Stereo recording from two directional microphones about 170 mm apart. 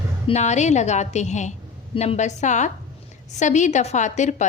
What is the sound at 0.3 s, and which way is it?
A woman's voice, 40° left (ahead or behind).